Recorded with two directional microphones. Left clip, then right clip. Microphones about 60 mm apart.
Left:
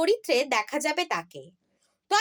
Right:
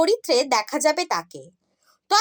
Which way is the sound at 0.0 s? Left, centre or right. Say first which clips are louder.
Right 4 dB; right.